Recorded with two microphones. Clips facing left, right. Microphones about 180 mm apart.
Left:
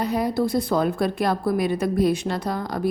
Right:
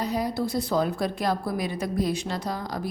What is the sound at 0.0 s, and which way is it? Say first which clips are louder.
A woman's voice: left 4 dB; 60° left (ahead or behind).